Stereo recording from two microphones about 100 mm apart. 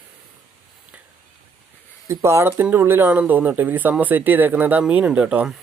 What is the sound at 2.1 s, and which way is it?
Speech, 25° right (ahead or behind).